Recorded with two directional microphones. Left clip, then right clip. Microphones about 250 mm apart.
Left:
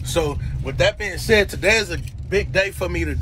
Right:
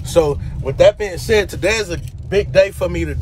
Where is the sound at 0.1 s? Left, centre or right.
Centre.